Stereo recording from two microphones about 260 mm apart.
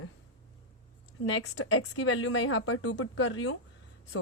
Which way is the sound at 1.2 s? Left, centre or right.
Left.